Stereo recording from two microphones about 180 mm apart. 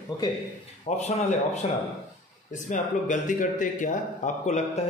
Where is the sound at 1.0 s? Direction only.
40° left (ahead or behind).